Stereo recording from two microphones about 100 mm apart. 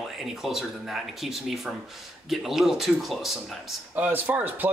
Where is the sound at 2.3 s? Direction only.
5° right (ahead or behind).